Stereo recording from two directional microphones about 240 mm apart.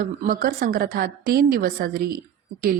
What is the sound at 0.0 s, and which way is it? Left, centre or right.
A woman's voice, right.